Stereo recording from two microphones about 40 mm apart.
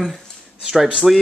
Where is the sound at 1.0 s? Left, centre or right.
Centre.